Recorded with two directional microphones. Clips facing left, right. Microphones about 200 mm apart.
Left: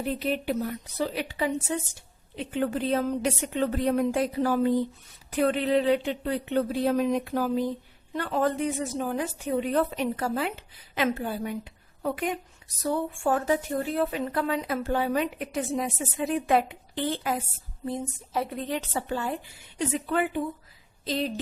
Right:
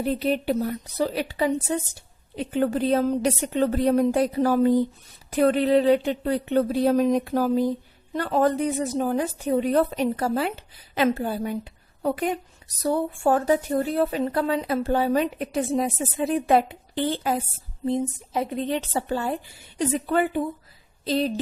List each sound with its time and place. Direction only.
0.0 s a woman's voice: 35° right (ahead or behind)
17.8 s a woman's voice: 20° right (ahead or behind)
19.0 s a woman's voice: 35° right (ahead or behind)